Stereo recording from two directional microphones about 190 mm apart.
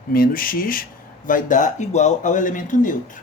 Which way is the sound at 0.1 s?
50° left (ahead or behind).